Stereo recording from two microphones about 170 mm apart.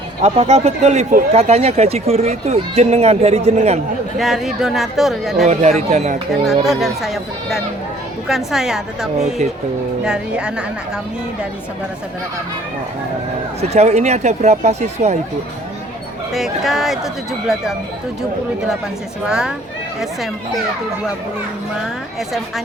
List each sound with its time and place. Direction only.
0.2 s speech: 40° right (ahead or behind)
4.2 s speech: centre (ahead or behind)
5.5 s speech: 40° right (ahead or behind)
6.7 s speech: centre (ahead or behind)
13.6 s speech: 40° right (ahead or behind)
16.3 s speech: centre (ahead or behind)
19.3 s speech: 5° right (ahead or behind)